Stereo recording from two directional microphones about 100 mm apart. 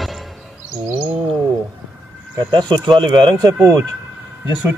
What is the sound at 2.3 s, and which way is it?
Speech, 50° right (ahead or behind).